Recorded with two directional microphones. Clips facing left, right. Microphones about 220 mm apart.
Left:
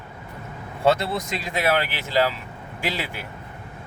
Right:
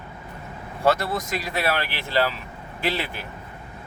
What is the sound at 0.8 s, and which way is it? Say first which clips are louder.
Speech: left 1 dB; 25° left (ahead or behind).